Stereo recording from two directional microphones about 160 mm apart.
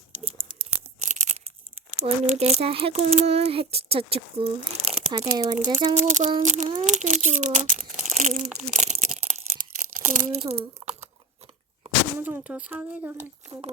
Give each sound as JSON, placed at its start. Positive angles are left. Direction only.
{"t": 1.0, "sound": "tearing", "side_deg": -50}
{"t": 2.0, "sound": "a child's voice", "side_deg": -40}
{"t": 5.7, "sound": "speech", "side_deg": -45}
{"t": 6.8, "sound": "crumpling", "side_deg": -50}
{"t": 10.4, "sound": "a sound", "side_deg": -40}
{"t": 12.2, "sound": "speech", "side_deg": -10}